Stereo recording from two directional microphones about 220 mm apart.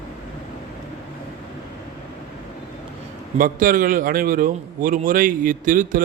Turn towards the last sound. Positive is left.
turn(degrees=-40)  # may be behind; listen again after turning